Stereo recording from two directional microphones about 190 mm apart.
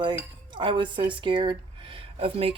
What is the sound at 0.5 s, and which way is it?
Speech, 25° right (ahead or behind).